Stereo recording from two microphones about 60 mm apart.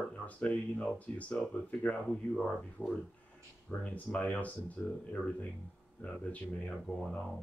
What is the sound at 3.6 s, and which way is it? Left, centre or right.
Speech, left.